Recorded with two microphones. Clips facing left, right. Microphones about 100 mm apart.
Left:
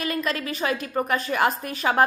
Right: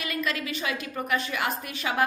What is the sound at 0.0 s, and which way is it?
A woman's voice, 35° left (ahead or behind).